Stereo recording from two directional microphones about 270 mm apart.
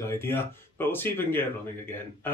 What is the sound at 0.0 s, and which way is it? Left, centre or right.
Speech, centre.